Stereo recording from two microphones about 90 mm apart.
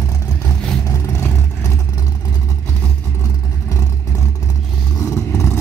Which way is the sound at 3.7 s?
35° left (ahead or behind).